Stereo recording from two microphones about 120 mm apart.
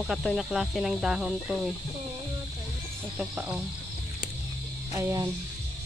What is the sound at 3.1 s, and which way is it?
Speech, 10° right (ahead or behind).